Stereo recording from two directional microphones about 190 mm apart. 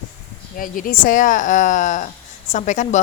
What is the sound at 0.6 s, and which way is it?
A woman's voice, 45° left (ahead or behind).